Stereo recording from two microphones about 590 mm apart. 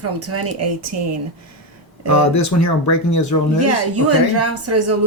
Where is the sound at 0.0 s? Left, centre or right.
Right.